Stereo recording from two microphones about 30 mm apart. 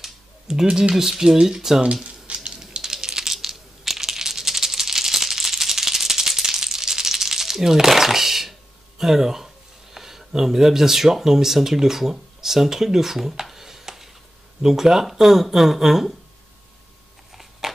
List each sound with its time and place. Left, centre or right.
0.7 s speech: right
0.9 s speech: centre
2.0 s a sound: right
2.6 s typing: centre
3.3 s rattle: centre
9.9 s speech: centre
13.5 s music: centre
14.6 s speech: centre
17.3 s a sound: centre